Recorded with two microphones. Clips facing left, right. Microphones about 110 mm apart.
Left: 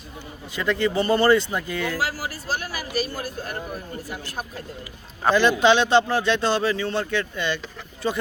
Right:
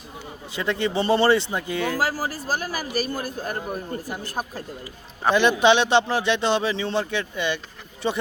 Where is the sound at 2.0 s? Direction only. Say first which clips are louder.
Right 3 dB; 40° right (ahead or behind).